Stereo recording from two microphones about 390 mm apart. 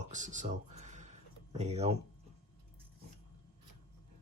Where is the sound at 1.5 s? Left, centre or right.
Centre.